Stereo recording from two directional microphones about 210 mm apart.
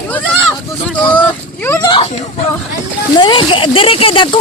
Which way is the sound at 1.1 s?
10° left (ahead or behind).